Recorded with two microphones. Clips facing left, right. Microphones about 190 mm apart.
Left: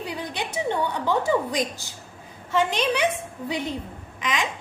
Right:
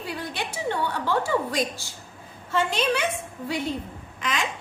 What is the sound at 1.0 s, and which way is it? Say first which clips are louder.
A woman's voice: left 2 dB; 20° left (ahead or behind).